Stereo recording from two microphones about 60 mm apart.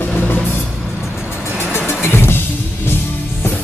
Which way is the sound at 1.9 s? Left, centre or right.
Left.